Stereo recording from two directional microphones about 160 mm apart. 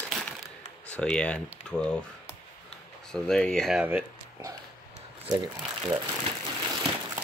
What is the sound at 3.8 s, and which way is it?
Speech, 15° right (ahead or behind).